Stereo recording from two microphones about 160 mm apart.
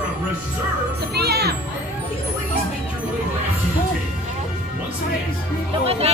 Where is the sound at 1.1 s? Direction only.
85° right.